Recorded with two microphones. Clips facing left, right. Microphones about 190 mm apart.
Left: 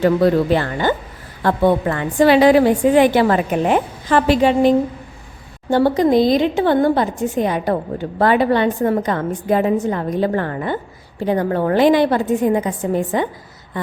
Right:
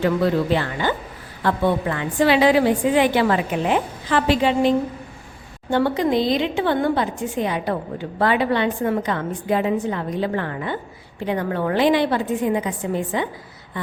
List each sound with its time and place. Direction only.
0.0 s a woman's voice: 45° left (ahead or behind)
5.7 s a woman's voice: 40° left (ahead or behind)